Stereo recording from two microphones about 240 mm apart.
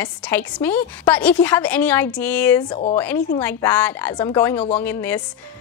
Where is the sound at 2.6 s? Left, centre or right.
Left.